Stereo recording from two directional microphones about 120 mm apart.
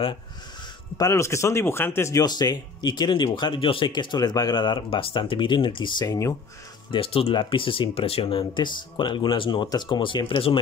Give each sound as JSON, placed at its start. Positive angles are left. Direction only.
{"t": 0.9, "sound": "speech", "side_deg": 25}
{"t": 6.9, "sound": "speech", "side_deg": 50}